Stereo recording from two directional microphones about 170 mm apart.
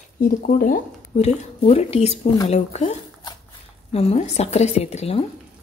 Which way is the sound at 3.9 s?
40° left (ahead or behind).